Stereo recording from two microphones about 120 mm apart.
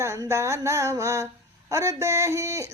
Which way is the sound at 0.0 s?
25° right (ahead or behind).